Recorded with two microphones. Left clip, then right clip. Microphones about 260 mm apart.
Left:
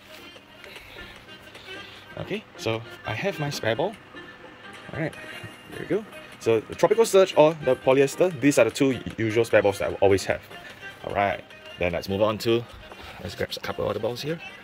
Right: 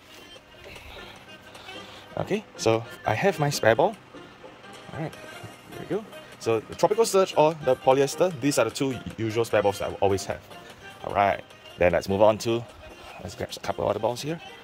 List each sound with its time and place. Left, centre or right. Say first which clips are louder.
2.1 s speech: right 4 dB; centre
6.4 s speech: left 2 dB; centre
11.1 s speech: right 2 dB; centre